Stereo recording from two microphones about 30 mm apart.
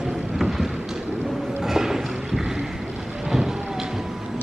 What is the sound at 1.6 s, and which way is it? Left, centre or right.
Music, centre.